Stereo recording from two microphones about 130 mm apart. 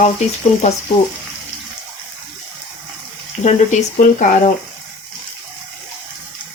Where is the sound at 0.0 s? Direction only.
60° left (ahead or behind).